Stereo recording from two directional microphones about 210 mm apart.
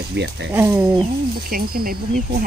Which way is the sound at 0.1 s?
55° right (ahead or behind).